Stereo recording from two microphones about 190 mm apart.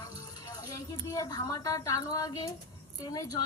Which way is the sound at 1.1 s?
20° left (ahead or behind).